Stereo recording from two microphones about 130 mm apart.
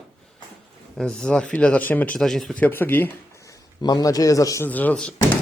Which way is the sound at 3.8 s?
30° left (ahead or behind).